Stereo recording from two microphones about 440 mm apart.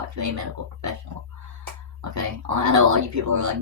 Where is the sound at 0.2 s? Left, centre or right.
Right.